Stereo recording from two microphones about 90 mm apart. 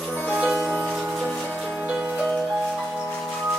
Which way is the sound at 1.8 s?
15° right (ahead or behind).